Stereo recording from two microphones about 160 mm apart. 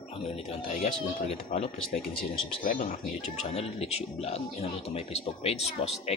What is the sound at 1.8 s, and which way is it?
Speech, centre (ahead or behind).